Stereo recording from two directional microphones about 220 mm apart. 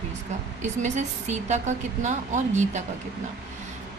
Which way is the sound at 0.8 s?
30° right (ahead or behind).